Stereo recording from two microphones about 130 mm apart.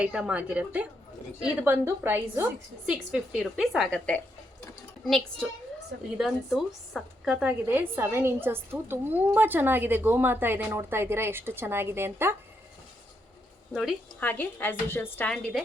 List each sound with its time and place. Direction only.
0.0 s a woman's voice: 5° right (ahead or behind)
14.2 s a woman's voice: 15° left (ahead or behind)